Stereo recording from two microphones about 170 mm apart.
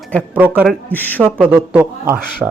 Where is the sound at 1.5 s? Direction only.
15° right (ahead or behind).